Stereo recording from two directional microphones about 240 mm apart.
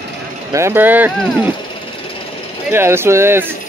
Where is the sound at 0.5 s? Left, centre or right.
Centre.